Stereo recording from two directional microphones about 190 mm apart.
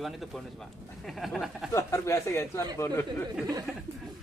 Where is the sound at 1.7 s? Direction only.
15° left (ahead or behind).